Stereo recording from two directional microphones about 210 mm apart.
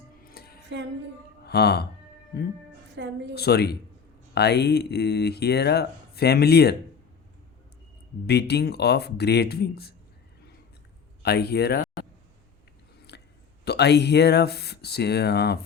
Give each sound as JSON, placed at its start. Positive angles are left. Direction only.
{"t": 0.2, "sound": "music", "side_deg": 45}
{"t": 1.5, "sound": "speech", "side_deg": 50}
{"t": 3.0, "sound": "a woman's voice", "side_deg": -60}
{"t": 3.3, "sound": "speech", "side_deg": 50}
{"t": 8.3, "sound": "speech", "side_deg": 50}
{"t": 11.2, "sound": "speech", "side_deg": 50}
{"t": 13.1, "sound": "a sound", "side_deg": 50}
{"t": 13.7, "sound": "speech", "side_deg": 50}